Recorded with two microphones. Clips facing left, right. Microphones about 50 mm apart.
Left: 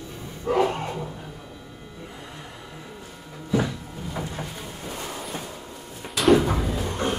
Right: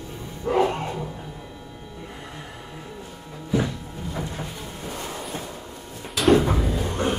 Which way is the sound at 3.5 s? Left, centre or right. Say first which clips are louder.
Even; centre.